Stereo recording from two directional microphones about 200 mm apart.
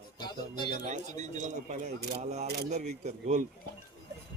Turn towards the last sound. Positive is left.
turn(degrees=-35)  # may be behind; listen again after turning